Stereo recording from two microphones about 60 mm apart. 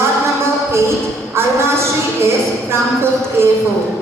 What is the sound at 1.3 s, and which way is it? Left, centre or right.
Speech, right.